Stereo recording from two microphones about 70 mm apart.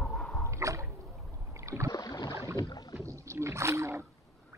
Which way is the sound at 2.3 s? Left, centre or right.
Right.